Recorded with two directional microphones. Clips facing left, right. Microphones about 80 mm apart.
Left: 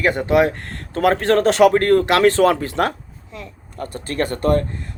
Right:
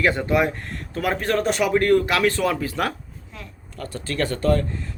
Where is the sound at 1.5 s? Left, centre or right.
Left.